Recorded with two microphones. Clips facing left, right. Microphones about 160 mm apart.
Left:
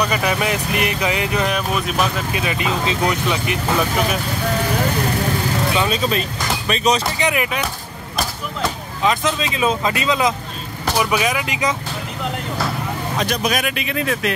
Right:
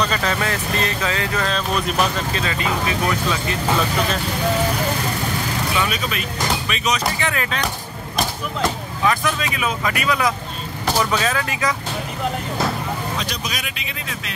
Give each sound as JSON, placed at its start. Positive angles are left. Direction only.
{"t": 0.0, "sound": "speech", "side_deg": 10}
{"t": 1.7, "sound": "speech", "side_deg": 5}
{"t": 2.3, "sound": "speech", "side_deg": 15}
{"t": 5.8, "sound": "speech", "side_deg": 30}
{"t": 7.2, "sound": "speech", "side_deg": 15}
{"t": 9.0, "sound": "speech", "side_deg": 20}
{"t": 13.2, "sound": "speech", "side_deg": 55}